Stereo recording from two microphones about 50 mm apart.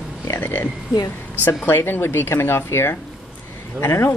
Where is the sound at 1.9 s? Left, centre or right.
Left.